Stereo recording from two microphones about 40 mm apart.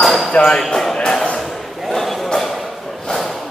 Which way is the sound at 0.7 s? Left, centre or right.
Centre.